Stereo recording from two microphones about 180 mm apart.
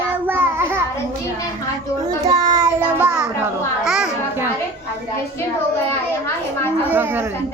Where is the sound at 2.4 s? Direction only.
20° right (ahead or behind).